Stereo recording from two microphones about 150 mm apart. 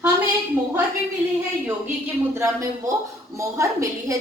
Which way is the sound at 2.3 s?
15° right (ahead or behind).